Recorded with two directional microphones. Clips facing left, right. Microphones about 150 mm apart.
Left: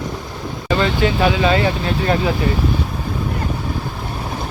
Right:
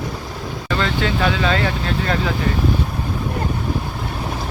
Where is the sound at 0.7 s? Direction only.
15° left (ahead or behind).